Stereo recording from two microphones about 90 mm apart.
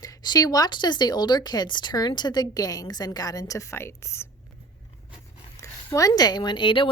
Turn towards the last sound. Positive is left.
turn(degrees=65)  # may be behind; listen again after turning